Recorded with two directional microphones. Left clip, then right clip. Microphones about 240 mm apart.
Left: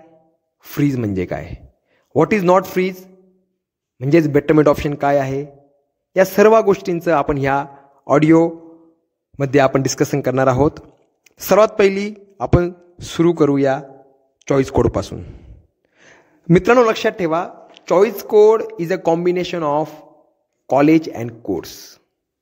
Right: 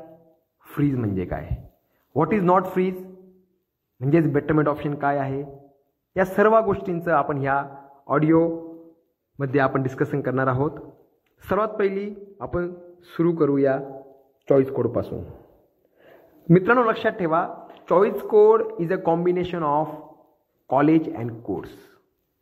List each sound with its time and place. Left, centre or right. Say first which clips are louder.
0.6 s a man's voice: left 5 dB; left
4.0 s a man's voice: left 6 dB; left